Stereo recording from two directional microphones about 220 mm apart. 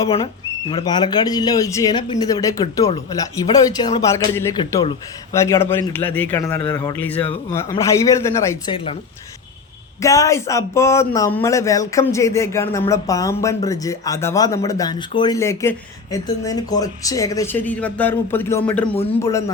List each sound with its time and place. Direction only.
0.7 s speech: 20° left (ahead or behind)
6.6 s speech: 20° left (ahead or behind)
8.7 s speech: 25° left (ahead or behind)
10.0 s speech: 15° left (ahead or behind)